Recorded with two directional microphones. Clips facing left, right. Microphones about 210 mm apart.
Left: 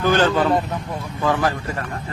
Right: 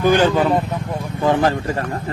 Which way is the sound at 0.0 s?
15° right (ahead or behind).